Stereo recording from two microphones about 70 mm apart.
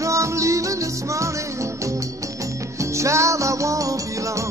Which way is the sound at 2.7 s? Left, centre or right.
Right.